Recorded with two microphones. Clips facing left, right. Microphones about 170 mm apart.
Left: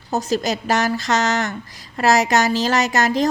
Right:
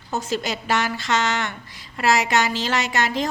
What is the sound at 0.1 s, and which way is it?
A woman's voice, 40° left (ahead or behind).